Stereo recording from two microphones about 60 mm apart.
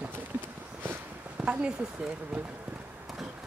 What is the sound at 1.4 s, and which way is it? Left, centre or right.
Speech, centre.